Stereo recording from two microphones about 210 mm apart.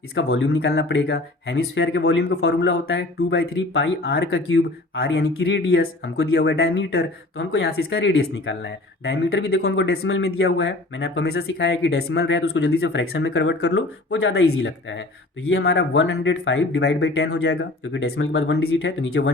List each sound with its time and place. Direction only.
0.1 s speech: 60° left (ahead or behind)